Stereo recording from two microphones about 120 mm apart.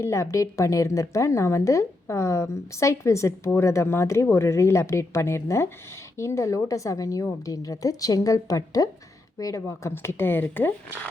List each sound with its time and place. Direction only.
0.0 s speech: 25° left (ahead or behind)